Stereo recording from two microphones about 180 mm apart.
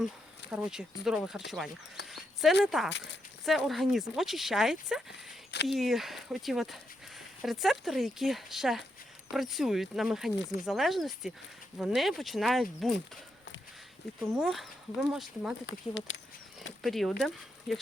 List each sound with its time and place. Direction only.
0.5 s speech: 5° right (ahead or behind)
2.0 s a sound: centre (ahead or behind)
2.6 s speech: centre (ahead or behind)
14.3 s speech: centre (ahead or behind)
16.0 s speech: 85° left
16.8 s speech: centre (ahead or behind)